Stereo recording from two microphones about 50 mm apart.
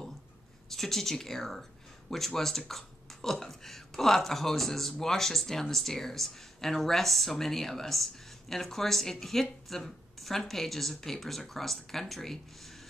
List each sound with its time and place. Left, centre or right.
0.7 s speech: centre